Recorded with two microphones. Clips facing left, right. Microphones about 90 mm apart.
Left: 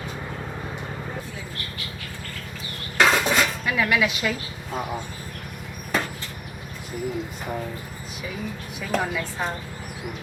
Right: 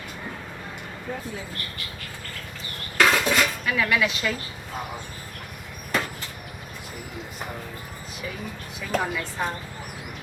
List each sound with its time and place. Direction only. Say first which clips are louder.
3.0 s dishes: left 1 dB; 20° left (ahead or behind)
3.9 s a woman's voice: left 1 dB; 5° left (ahead or behind)
8.8 s a woman's voice: left 1 dB; centre (ahead or behind)